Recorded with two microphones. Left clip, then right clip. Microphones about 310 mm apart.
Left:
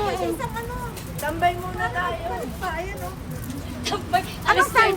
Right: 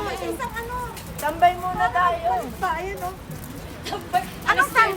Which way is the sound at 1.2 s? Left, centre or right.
Centre.